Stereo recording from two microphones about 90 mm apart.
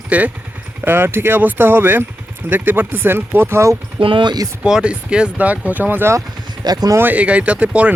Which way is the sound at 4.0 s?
65° right (ahead or behind).